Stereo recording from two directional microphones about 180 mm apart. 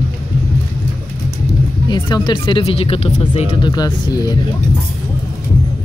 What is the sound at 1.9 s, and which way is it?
Speech, 25° left (ahead or behind).